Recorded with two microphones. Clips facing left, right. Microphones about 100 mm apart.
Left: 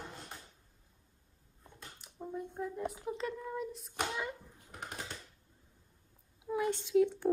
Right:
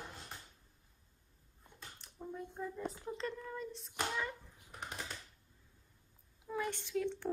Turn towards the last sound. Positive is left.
turn(degrees=15)  # may be behind; listen again after turning